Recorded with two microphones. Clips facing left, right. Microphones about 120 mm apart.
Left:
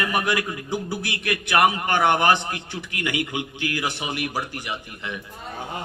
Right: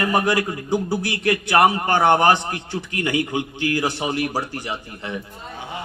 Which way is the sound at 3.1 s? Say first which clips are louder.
Right 5 dB; 15° left (ahead or behind).